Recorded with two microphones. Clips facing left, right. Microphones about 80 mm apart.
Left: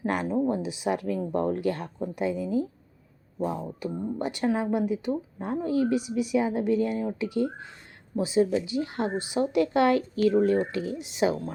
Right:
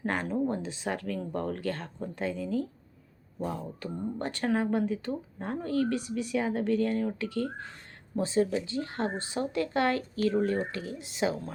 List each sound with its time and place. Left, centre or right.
0.0 s speech: centre
3.8 s speech: centre